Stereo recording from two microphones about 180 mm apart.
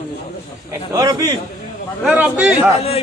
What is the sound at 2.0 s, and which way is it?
Speech, 10° right (ahead or behind).